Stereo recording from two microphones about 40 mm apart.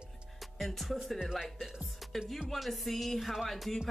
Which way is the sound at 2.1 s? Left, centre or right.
Centre.